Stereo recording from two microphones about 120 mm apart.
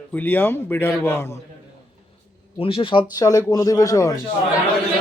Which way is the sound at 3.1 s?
30° left (ahead or behind).